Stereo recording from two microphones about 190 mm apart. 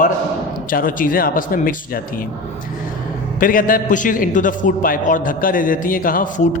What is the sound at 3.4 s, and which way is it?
A man's voice, 45° left (ahead or behind).